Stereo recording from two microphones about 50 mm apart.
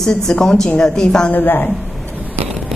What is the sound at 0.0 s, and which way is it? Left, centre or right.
A woman's voice, centre.